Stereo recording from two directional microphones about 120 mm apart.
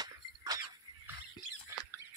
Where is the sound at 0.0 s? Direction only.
30° right (ahead or behind).